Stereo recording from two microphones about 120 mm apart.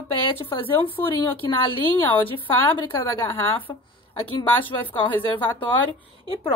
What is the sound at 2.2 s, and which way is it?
Speech, 50° left (ahead or behind).